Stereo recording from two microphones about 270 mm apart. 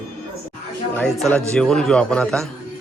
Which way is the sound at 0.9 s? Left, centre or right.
Centre.